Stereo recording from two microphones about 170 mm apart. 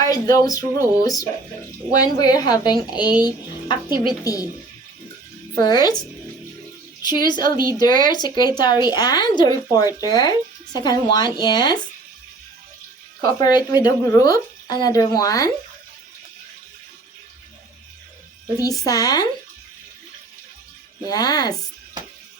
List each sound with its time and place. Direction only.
0.0 s speech: 20° left (ahead or behind)
5.5 s speech: 25° left (ahead or behind)
7.0 s speech: 25° left (ahead or behind)
13.4 s speech: 25° left (ahead or behind)
18.9 s speech: 20° left (ahead or behind)
21.1 s speech: 20° left (ahead or behind)